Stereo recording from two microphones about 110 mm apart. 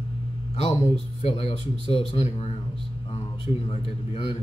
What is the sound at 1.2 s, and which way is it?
Speech, 70° left (ahead or behind).